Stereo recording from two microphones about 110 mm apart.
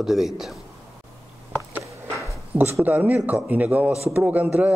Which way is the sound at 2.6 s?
20° right (ahead or behind).